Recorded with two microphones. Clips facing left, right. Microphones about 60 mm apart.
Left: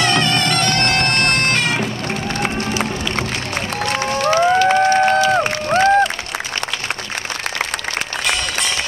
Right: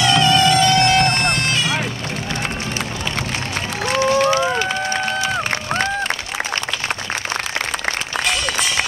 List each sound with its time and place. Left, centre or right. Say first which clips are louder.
0.0 s music: right 3 dB; left
4.2 s run: left 1 dB; left
4.6 s a sound: left 8 dB; left